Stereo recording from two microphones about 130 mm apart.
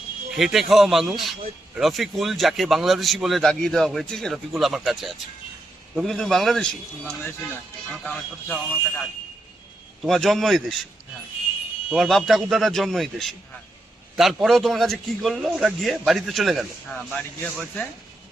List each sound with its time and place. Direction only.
0.3 s a man's voice: centre (ahead or behind)
7.3 s a man's voice: 15° left (ahead or behind); by 10.8 s centre (ahead or behind)
11.9 s a man's voice: centre (ahead or behind)